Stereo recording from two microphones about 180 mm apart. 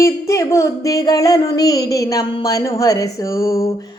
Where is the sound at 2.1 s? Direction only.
20° left (ahead or behind).